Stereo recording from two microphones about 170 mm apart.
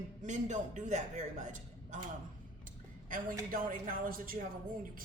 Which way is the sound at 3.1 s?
55° right (ahead or behind).